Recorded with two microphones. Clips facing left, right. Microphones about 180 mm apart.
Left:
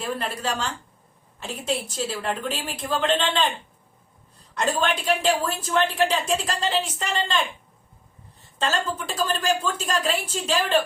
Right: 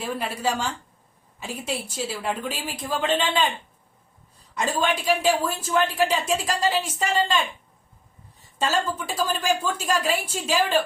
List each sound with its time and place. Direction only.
0.0 s a woman's voice: 5° right (ahead or behind)
4.5 s a woman's voice: 10° right (ahead or behind)
8.5 s a woman's voice: 10° right (ahead or behind)